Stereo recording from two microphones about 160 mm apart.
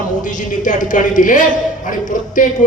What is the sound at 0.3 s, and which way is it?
A man's voice, 55° left (ahead or behind).